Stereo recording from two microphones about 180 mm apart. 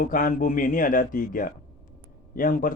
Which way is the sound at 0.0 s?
50° left (ahead or behind).